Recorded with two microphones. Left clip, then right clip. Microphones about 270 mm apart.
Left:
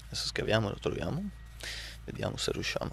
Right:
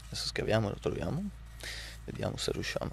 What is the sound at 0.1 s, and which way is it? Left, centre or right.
Speech, centre.